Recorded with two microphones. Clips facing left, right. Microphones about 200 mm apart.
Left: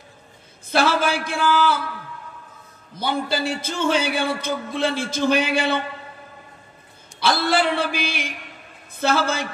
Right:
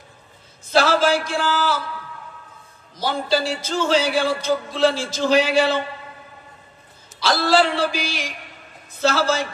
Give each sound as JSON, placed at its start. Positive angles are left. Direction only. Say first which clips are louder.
{"t": 0.7, "sound": "a man's voice", "louder": "right 3 dB", "side_deg": 55}
{"t": 2.9, "sound": "a man's voice", "louder": "right 2 dB", "side_deg": 55}
{"t": 7.2, "sound": "a man's voice", "louder": "right 2 dB", "side_deg": 55}